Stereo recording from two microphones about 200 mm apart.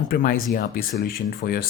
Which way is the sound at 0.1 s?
45° left (ahead or behind).